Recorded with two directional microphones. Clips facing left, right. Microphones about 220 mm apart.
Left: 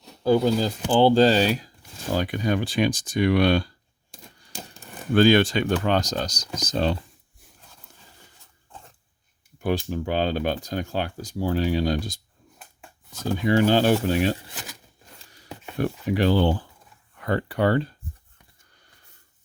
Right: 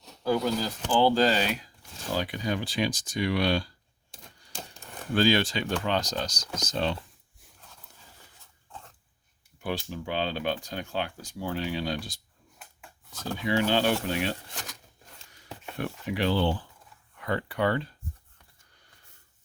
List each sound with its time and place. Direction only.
0.2 s speech: 30° left (ahead or behind)
2.1 s speech: 50° left (ahead or behind)
4.1 s typewriter: 10° left (ahead or behind)
5.1 s speech: 55° left (ahead or behind); by 6.9 s 40° left (ahead or behind)
9.6 s speech: 45° left (ahead or behind)
13.4 s speech: 45° left (ahead or behind)
14.4 s speech: 5° left (ahead or behind)
15.8 s speech: 40° left (ahead or behind)